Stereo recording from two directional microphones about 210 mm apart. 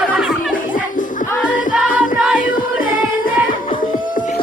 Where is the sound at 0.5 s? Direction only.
40° left (ahead or behind).